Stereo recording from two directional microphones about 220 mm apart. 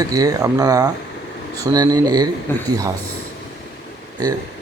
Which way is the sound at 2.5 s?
10° left (ahead or behind).